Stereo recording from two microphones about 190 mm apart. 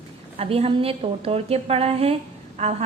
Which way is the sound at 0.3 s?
30° right (ahead or behind).